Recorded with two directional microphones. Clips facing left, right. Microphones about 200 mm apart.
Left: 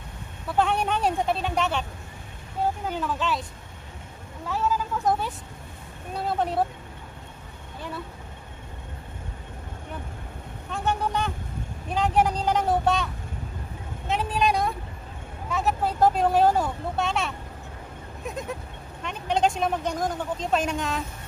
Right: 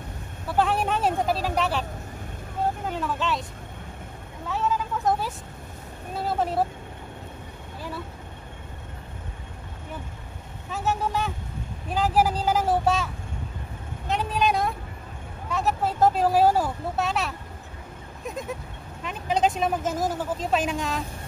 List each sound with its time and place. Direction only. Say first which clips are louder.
0.5 s speech: even; centre (ahead or behind)
2.9 s speech: even; centre (ahead or behind)
4.5 s speech: even; centre (ahead or behind)
10.7 s speech: even; 5° right (ahead or behind)
18.2 s goat: even; centre (ahead or behind)
19.0 s speech: even; centre (ahead or behind)